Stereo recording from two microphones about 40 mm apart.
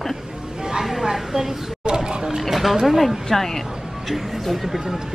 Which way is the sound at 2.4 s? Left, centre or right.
Centre.